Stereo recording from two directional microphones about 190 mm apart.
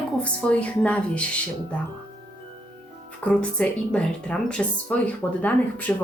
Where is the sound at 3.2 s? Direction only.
5° left (ahead or behind).